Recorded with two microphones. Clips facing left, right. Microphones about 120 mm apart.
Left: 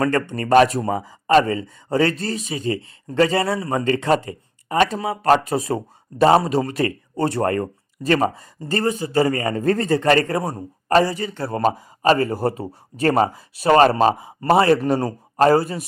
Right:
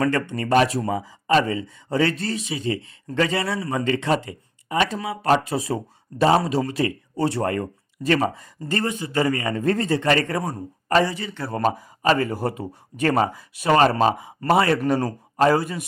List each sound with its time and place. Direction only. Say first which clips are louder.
0.0 s speech: left 2 dB; 40° left (ahead or behind)
11.4 s speech: left 2 dB; 25° left (ahead or behind)